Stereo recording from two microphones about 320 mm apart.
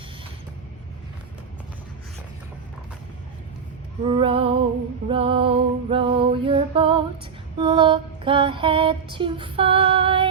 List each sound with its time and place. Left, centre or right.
4.0 s mantra: centre